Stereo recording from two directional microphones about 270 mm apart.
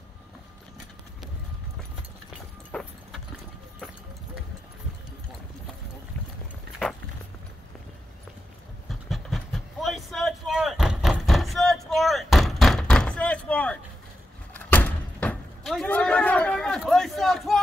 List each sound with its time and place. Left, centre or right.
2.7 s clip-clop: centre
9.1 s a sound: centre
14.5 s door: centre